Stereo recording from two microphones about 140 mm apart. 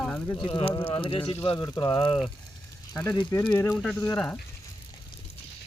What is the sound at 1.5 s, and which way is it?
Speech, 25° left (ahead or behind).